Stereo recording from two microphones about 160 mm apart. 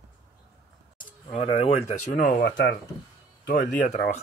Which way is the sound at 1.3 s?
35° left (ahead or behind).